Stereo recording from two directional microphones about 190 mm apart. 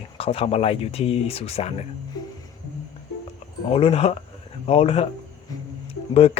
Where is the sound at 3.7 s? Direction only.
30° left (ahead or behind).